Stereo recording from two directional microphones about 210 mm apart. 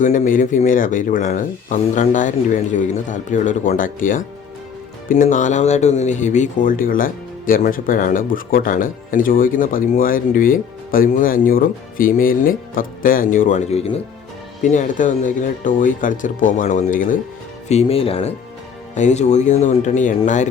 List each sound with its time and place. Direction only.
0.0 s speech: 40° left (ahead or behind)
17.7 s speech: 30° left (ahead or behind)